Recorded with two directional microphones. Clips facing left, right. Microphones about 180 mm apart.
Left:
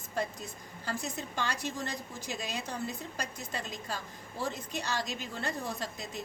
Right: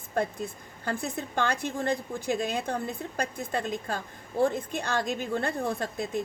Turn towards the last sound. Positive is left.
turn(degrees=-55)  # may be behind; listen again after turning